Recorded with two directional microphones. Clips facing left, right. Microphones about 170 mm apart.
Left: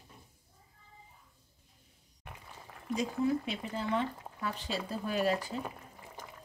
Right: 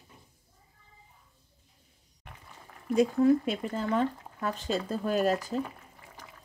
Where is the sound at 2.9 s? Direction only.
50° right (ahead or behind).